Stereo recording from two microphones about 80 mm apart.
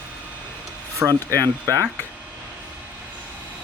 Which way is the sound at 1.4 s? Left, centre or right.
Right.